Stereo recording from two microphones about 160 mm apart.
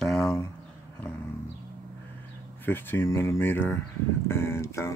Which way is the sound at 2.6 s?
10° left (ahead or behind).